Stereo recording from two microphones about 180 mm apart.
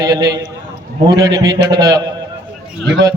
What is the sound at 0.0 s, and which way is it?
A man's voice, 20° right (ahead or behind).